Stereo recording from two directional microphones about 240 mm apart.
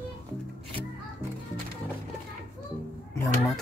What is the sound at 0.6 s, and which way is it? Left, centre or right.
Music, right.